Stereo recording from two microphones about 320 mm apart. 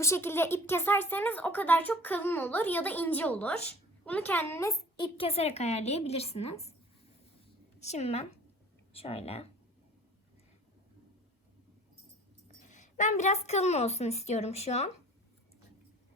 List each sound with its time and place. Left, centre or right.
0.0 s speech: centre
7.8 s a woman's voice: left
12.6 s a woman's voice: left